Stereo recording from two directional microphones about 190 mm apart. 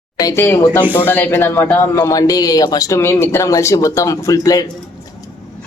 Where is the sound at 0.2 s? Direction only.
15° left (ahead or behind).